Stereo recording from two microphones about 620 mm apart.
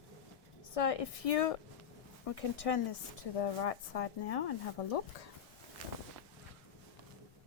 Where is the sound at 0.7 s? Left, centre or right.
Left.